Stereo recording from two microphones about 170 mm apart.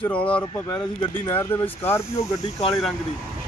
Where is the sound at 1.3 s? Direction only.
10° left (ahead or behind).